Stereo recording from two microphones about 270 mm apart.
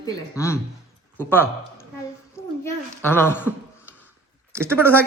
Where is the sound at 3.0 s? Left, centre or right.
Centre.